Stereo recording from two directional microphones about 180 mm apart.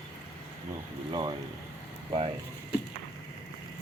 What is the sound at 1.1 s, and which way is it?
Speech, 25° right (ahead or behind).